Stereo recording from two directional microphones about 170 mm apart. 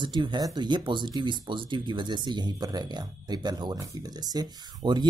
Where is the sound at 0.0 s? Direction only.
25° right (ahead or behind).